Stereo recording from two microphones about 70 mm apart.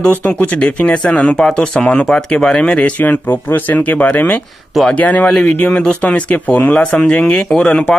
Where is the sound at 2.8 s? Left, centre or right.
Left.